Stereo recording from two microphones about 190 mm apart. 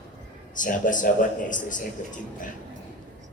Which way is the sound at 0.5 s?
45° left (ahead or behind).